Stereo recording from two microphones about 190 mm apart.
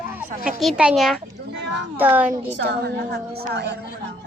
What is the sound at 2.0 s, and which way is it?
Speech, 10° right (ahead or behind).